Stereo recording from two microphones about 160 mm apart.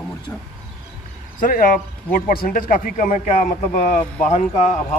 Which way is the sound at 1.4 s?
60° left (ahead or behind).